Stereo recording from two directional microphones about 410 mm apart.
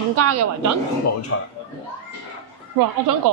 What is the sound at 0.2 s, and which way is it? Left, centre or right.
Speech, right.